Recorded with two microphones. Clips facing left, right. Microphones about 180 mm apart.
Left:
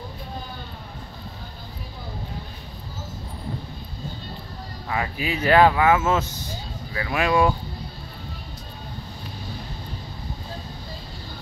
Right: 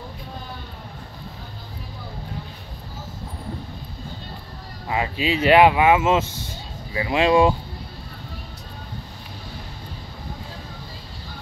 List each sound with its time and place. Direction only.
4.8 s speech: 20° right (ahead or behind)